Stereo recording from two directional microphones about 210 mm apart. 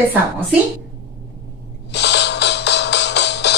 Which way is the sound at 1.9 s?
55° left (ahead or behind).